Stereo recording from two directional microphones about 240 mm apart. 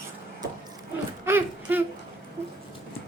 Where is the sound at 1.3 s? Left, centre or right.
Centre.